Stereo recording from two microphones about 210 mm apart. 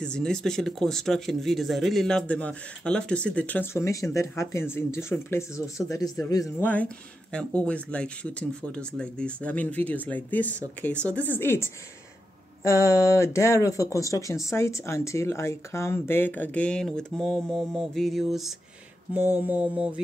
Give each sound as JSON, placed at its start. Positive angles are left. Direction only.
{"t": 0.0, "sound": "speech", "side_deg": 5}